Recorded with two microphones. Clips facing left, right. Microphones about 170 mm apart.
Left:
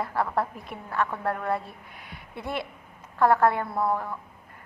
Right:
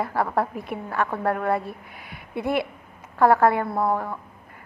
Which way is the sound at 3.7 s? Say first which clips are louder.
Right 3 dB; 25° right (ahead or behind).